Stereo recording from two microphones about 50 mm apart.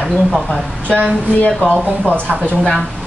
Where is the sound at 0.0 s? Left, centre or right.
Left.